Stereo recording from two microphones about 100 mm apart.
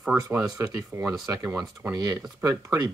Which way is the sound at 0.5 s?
35° right (ahead or behind).